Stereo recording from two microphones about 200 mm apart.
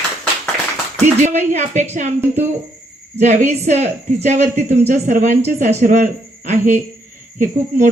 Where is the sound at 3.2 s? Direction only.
35° right (ahead or behind).